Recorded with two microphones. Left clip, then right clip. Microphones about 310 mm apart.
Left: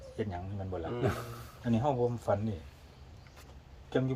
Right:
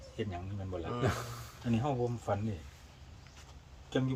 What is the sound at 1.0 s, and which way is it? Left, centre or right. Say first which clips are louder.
Speech: even; centre.